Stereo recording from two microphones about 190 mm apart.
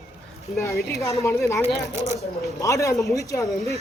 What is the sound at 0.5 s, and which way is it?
Speech, 15° left (ahead or behind).